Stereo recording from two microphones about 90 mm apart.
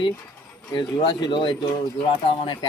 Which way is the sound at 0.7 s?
90° left.